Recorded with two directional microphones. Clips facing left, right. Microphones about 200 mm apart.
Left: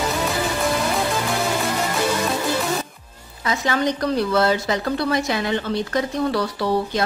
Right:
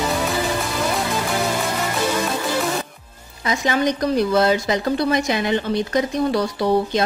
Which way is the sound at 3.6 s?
15° right (ahead or behind).